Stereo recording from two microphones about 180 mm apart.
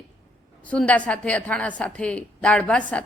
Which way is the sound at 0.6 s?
5° left (ahead or behind).